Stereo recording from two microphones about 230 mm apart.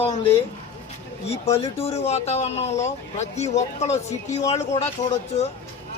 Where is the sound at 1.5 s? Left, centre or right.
Left.